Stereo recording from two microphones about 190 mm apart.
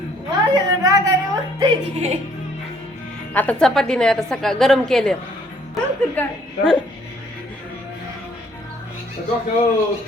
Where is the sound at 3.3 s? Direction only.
5° left (ahead or behind).